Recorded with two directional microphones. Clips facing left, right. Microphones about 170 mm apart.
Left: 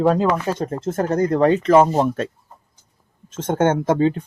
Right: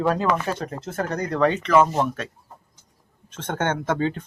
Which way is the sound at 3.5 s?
25° left (ahead or behind).